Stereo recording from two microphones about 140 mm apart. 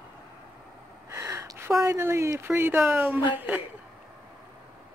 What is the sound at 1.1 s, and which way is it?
Speech, 20° right (ahead or behind).